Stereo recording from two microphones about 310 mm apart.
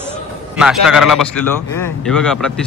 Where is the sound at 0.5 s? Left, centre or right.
Centre.